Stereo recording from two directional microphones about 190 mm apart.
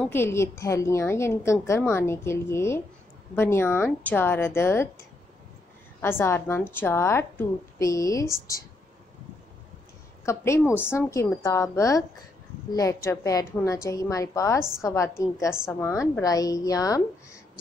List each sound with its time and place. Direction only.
0.0 s a woman's voice: 10° left (ahead or behind)
5.9 s a woman's voice: 10° left (ahead or behind)
10.2 s a woman's voice: 15° left (ahead or behind)